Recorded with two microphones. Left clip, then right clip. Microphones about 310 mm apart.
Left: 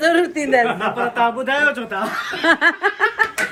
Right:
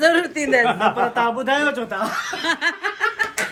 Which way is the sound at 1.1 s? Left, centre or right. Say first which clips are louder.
Left 2 dB; right.